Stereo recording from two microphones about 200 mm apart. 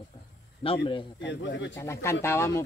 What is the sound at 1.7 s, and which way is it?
Speech, 15° left (ahead or behind).